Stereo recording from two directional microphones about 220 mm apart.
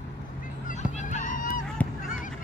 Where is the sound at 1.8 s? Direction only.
Centre (ahead or behind).